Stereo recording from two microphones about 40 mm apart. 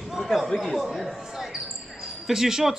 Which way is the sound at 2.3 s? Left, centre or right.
Centre.